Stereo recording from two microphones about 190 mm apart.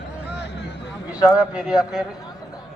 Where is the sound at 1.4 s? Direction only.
5° right (ahead or behind).